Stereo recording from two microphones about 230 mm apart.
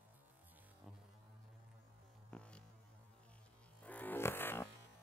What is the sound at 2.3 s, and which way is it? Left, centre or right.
Music, centre.